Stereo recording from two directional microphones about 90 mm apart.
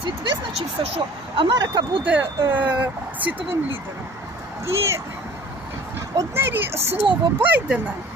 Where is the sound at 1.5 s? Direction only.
45° right (ahead or behind).